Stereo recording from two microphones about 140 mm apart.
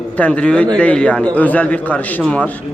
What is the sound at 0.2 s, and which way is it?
A man's voice, 10° left (ahead or behind).